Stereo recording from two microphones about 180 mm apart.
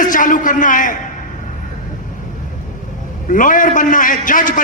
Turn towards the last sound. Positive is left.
turn(degrees=50)  # may be behind; listen again after turning